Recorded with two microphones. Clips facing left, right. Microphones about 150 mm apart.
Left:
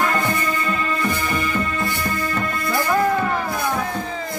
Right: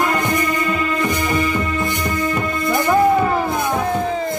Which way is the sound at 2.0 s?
20° right (ahead or behind).